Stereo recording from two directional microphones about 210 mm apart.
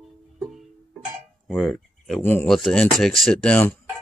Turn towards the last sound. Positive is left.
turn(degrees=5)  # may be behind; listen again after turning